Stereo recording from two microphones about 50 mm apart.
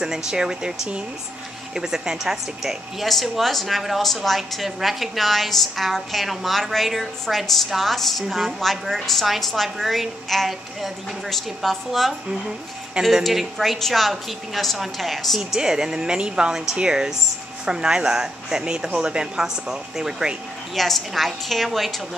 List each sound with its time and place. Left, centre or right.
0.0 s speech: centre
1.8 s a woman's voice: centre
13.2 s a woman's voice: centre
15.6 s speech: centre
20.7 s a woman's voice: centre